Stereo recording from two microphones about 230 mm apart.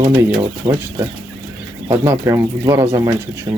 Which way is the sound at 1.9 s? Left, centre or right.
Centre.